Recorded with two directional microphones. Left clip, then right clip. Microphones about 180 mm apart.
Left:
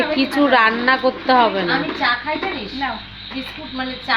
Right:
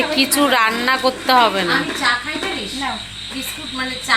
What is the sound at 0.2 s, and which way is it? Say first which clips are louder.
A woman's voice: left 1 dB; 15° left (ahead or behind).